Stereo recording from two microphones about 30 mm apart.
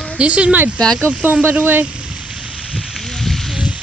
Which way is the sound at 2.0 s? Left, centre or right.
Right.